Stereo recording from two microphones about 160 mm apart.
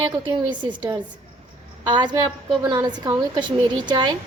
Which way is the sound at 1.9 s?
25° right (ahead or behind).